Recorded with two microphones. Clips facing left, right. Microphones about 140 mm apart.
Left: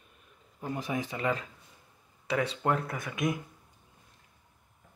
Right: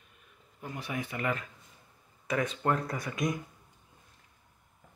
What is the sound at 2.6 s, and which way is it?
Speech, 5° left (ahead or behind).